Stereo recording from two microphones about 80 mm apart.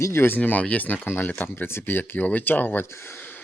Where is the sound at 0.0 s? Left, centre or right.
Left.